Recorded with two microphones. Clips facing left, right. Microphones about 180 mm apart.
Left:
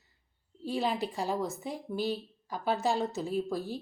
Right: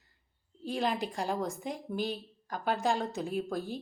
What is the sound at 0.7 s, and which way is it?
A woman's voice, 5° left (ahead or behind).